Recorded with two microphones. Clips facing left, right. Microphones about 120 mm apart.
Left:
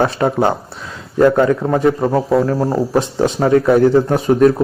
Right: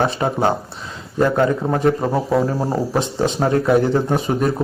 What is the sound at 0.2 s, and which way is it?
Speech, 5° right (ahead or behind).